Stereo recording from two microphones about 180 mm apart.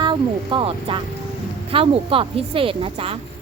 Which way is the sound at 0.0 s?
25° right (ahead or behind).